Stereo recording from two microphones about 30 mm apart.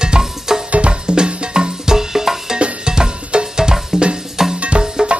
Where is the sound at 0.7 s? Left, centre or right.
Right.